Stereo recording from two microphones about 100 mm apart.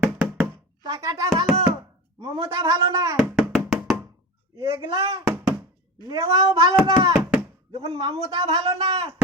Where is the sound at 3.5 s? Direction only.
Centre (ahead or behind).